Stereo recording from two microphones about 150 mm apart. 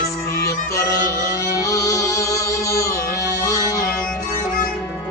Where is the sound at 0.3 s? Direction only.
20° left (ahead or behind).